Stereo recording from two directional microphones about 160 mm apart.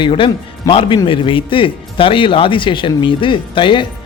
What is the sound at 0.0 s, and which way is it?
A man's voice, 30° left (ahead or behind).